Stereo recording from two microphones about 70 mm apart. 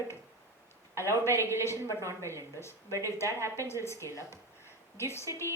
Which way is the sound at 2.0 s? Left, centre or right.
Right.